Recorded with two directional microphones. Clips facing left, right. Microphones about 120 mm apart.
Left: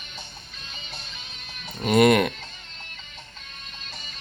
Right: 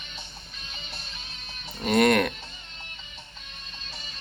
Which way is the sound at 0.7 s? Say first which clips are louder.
Left 2 dB; 5° right (ahead or behind).